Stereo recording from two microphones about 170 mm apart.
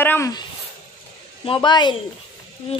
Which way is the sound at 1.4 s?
30° left (ahead or behind).